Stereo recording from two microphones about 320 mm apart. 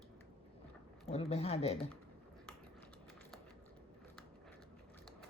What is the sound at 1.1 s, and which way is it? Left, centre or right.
Speech, centre.